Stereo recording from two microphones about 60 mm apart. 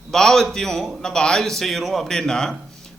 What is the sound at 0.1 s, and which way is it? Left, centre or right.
A man's voice, centre.